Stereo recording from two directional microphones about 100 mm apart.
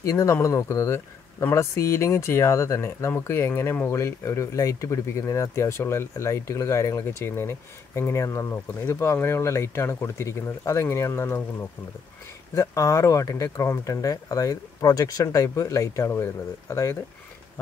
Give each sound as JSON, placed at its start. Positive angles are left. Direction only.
{"t": 0.0, "sound": "speech", "side_deg": 30}
{"t": 12.5, "sound": "speech", "side_deg": 30}